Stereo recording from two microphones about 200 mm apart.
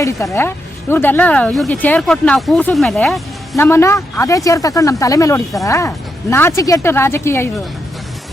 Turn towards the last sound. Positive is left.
turn(degrees=10)  # may be behind; listen again after turning